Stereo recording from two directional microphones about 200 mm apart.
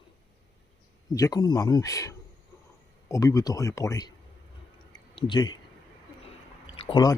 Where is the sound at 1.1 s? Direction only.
20° left (ahead or behind).